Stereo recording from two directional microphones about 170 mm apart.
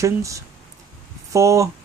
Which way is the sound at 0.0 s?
20° right (ahead or behind).